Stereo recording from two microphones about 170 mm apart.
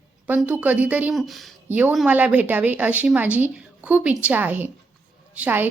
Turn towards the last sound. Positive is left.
turn(degrees=-10)  # may be behind; listen again after turning